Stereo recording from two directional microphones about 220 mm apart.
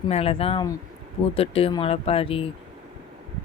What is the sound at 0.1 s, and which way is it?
Speech, 25° left (ahead or behind).